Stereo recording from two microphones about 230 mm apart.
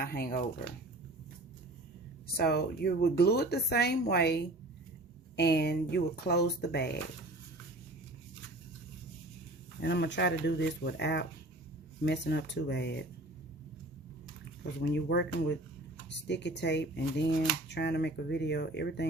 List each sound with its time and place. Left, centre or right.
0.0 s speech: left
2.2 s a woman's voice: left
9.8 s a woman's voice: left
14.6 s a woman's voice: left